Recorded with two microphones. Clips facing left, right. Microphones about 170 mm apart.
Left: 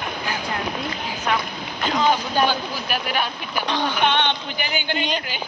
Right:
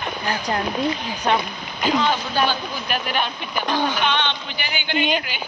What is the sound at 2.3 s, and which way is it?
Speech, 10° left (ahead or behind).